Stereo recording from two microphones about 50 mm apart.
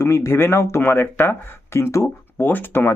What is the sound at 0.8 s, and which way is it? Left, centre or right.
Speech, left.